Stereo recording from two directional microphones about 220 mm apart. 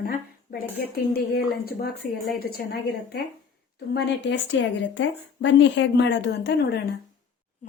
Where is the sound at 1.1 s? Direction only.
45° left (ahead or behind).